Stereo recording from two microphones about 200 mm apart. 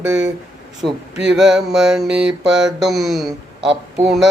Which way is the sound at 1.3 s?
Centre (ahead or behind).